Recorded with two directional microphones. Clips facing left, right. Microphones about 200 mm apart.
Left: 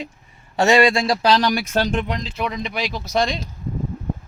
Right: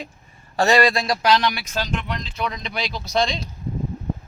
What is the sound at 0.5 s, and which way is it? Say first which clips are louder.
Speech: left 2 dB; 25° left (ahead or behind).